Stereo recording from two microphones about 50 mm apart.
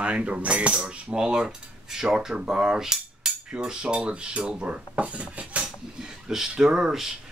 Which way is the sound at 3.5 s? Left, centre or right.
Centre.